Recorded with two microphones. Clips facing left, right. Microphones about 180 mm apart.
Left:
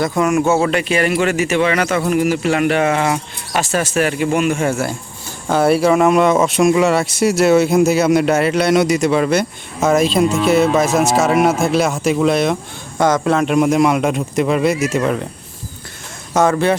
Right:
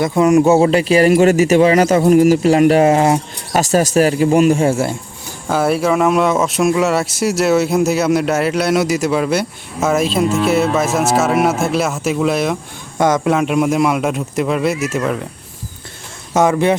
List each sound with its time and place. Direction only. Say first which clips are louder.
0.0 s speech: right 4 dB; 25° right (ahead or behind)
5.5 s speech: left 2 dB; centre (ahead or behind)
16.3 s speech: right 1 dB; 20° right (ahead or behind)